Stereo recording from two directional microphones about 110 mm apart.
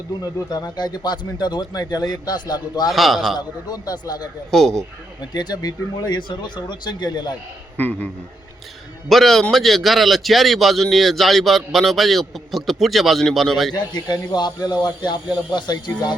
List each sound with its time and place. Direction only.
0.2 s speech: 35° left (ahead or behind)
2.9 s a man's voice: centre (ahead or behind)
3.3 s speech: 40° left (ahead or behind)
4.5 s a man's voice: centre (ahead or behind)
5.3 s speech: 40° left (ahead or behind)
7.8 s a man's voice: 15° left (ahead or behind)
9.0 s a man's voice: centre (ahead or behind)
13.7 s speech: 40° left (ahead or behind)